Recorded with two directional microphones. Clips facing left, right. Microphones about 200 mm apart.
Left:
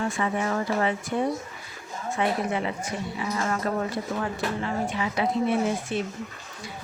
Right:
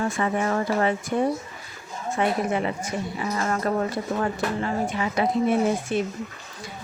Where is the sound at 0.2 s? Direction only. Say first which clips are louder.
Right 3 dB; 45° right (ahead or behind).